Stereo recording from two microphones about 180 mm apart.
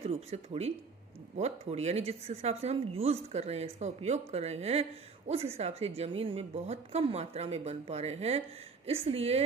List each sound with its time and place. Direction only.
0.0 s a woman's voice: 35° right (ahead or behind)